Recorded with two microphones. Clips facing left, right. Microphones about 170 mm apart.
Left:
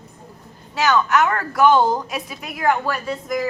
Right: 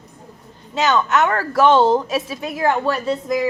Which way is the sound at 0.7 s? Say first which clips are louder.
Even; 20° right (ahead or behind).